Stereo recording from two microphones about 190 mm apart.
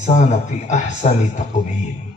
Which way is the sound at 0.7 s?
40° left (ahead or behind).